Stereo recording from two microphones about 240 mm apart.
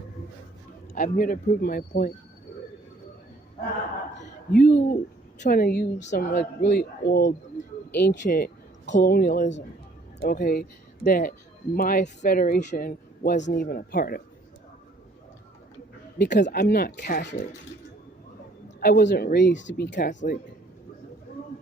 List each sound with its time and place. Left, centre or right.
0.9 s speech: left
4.5 s speech: left
16.2 s speech: left
18.8 s speech: left